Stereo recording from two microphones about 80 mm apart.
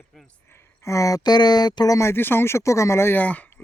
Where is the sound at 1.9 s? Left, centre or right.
Left.